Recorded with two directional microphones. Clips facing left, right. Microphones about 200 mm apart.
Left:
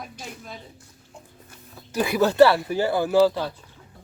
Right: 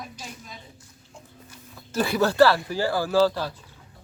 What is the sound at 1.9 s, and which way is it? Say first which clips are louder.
Speech: left 2 dB; 15° left (ahead or behind).